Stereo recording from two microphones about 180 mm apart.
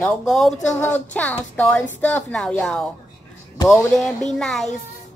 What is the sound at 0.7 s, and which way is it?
A woman's voice, 10° left (ahead or behind).